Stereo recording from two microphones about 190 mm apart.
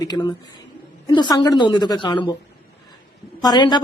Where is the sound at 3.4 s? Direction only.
25° left (ahead or behind).